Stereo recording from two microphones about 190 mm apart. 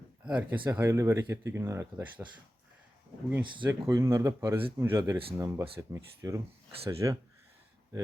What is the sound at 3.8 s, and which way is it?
Speech, 20° right (ahead or behind).